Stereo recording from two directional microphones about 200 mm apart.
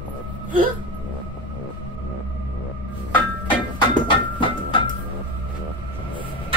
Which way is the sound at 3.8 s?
25° left (ahead or behind).